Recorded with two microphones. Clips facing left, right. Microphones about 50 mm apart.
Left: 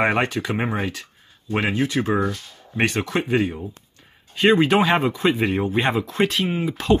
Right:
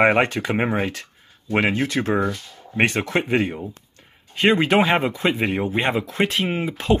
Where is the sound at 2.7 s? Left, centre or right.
Right.